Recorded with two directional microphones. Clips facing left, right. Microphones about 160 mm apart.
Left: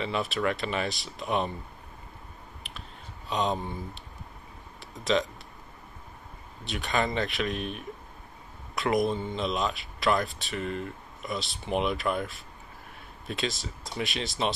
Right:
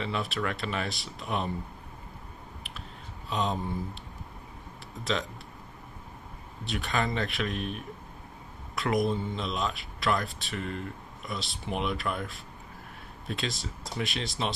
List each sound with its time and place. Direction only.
0.0 s speech: centre (ahead or behind)
3.3 s a sound: centre (ahead or behind)
6.6 s speech: centre (ahead or behind)